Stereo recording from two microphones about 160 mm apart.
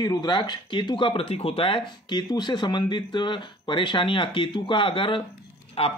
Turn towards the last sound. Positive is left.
turn(degrees=35)  # may be behind; listen again after turning